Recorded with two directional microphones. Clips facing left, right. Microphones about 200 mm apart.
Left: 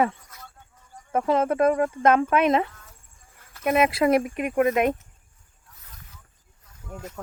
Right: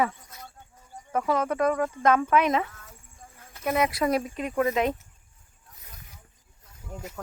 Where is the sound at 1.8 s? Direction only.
55° left (ahead or behind).